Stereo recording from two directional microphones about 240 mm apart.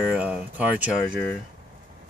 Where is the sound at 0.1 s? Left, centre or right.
Centre.